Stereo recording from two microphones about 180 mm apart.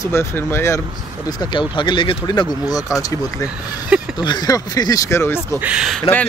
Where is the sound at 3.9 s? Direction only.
5° right (ahead or behind).